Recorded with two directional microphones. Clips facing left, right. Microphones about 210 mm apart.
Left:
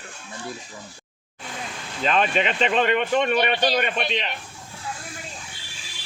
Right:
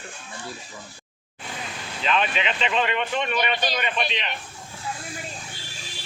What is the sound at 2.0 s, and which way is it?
Speech, 45° left (ahead or behind).